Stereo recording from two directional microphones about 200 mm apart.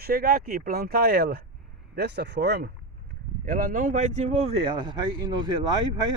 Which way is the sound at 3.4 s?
45° right (ahead or behind).